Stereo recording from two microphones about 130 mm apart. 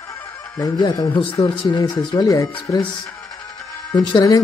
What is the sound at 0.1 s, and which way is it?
Speech, 30° left (ahead or behind).